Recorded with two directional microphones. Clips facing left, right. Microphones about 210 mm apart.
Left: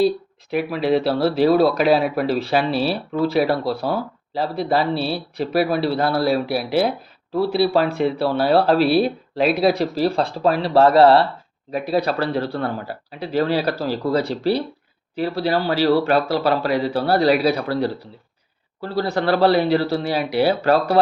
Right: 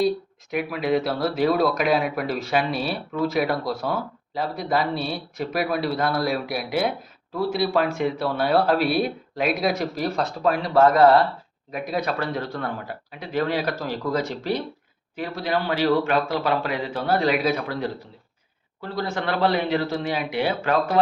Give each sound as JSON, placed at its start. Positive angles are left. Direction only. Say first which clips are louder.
{"t": 0.5, "sound": "speech", "louder": "left 4 dB", "side_deg": 30}